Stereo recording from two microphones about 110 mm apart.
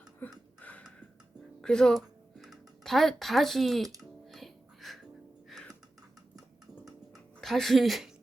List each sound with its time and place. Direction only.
0.6 s a sound: 15° left (ahead or behind)
4.3 s music: centre (ahead or behind)
7.4 s speech: centre (ahead or behind)